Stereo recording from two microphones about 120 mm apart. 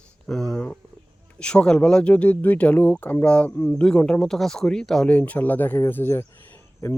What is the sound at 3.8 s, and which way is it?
Speech, 5° left (ahead or behind).